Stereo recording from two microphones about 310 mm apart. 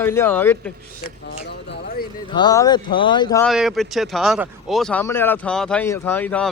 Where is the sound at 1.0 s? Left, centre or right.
Left.